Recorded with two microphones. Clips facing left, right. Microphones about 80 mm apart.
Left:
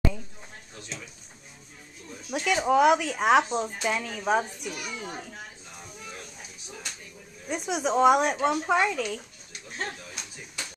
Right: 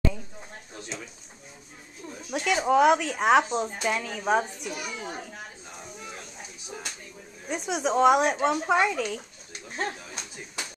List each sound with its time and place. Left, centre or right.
2.3 s speech: centre
7.4 s speech: centre
9.5 s a sound: right